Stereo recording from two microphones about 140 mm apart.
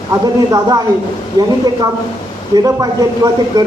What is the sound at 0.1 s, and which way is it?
Speech, 20° right (ahead or behind).